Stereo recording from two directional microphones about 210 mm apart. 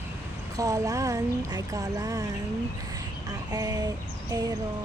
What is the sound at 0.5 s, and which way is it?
Speech, 15° right (ahead or behind).